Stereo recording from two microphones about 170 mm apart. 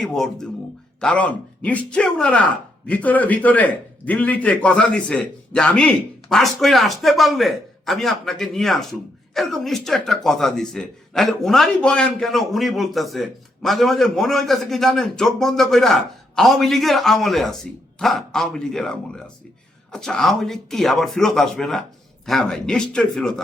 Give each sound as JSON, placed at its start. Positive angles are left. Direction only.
{"t": 0.0, "sound": "speech", "side_deg": 0}